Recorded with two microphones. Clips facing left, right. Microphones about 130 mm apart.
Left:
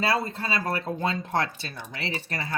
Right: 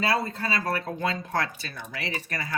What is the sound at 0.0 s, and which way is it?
Speech, 25° left (ahead or behind).